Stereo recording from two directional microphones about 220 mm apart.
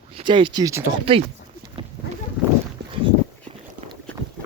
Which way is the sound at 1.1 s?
25° right (ahead or behind).